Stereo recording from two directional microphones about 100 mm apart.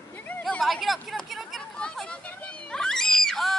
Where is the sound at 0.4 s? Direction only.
5° left (ahead or behind).